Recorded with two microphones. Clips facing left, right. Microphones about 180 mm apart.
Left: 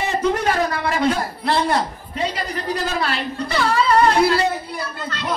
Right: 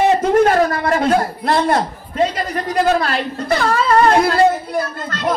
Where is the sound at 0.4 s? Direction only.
50° right (ahead or behind).